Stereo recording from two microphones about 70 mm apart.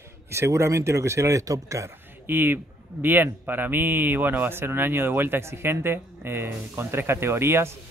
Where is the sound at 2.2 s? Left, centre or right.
Right.